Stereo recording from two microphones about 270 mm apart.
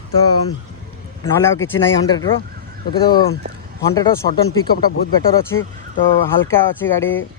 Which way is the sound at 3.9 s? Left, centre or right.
Centre.